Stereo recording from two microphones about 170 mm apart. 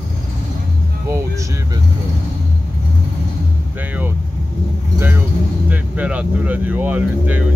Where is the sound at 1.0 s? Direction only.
15° right (ahead or behind).